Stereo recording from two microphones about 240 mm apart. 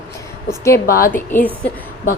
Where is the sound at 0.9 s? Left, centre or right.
Left.